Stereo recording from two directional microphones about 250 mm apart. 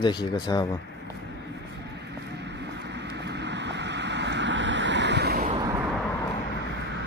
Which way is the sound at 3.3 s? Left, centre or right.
Right.